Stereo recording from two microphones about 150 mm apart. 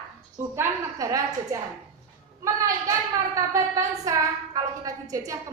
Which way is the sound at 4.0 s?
25° right (ahead or behind).